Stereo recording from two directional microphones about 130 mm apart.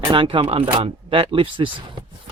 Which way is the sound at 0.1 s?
40° right (ahead or behind).